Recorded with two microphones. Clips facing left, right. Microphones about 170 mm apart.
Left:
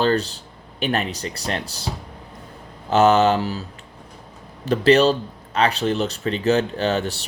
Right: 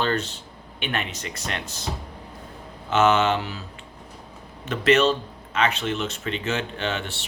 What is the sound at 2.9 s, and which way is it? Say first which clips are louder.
Speech: left 4 dB; 35° left (ahead or behind).